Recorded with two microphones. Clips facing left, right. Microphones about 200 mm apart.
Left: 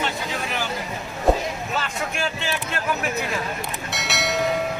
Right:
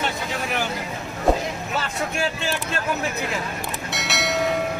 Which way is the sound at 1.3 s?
Centre (ahead or behind).